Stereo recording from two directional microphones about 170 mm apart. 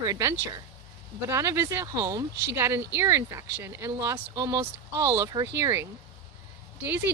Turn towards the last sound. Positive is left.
turn(degrees=-10)  # may be behind; listen again after turning